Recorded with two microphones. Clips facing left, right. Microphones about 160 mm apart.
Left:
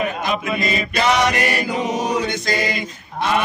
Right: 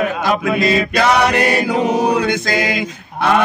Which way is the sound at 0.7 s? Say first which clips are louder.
Right 4 dB; 70° right (ahead or behind).